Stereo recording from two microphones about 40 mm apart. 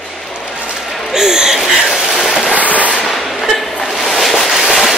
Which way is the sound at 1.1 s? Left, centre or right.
Centre.